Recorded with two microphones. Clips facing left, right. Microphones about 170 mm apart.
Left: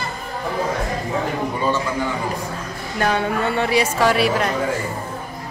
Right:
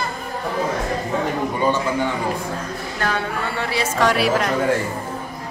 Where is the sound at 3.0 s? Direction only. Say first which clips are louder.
Left 5 dB; 20° left (ahead or behind).